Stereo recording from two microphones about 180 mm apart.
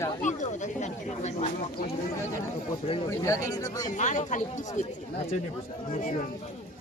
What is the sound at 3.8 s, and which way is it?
Speech, 45° left (ahead or behind).